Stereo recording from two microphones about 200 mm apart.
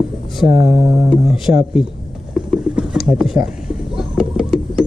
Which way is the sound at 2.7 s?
Centre (ahead or behind).